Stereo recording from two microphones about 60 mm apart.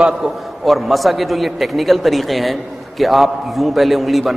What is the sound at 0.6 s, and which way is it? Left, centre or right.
A man's voice, centre.